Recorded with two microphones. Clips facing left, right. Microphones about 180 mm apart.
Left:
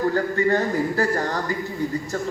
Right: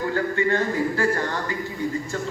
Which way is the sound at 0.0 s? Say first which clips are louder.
Left 2 dB; 40° left (ahead or behind).